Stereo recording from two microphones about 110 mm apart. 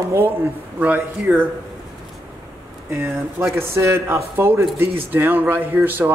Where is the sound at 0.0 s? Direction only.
25° right (ahead or behind).